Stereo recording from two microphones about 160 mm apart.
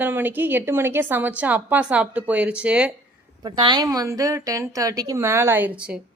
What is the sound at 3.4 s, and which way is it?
A woman's voice, 25° right (ahead or behind).